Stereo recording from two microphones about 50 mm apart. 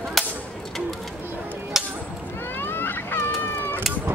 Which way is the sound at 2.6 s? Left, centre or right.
Left.